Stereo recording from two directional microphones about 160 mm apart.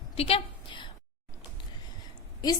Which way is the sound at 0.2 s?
35° left (ahead or behind).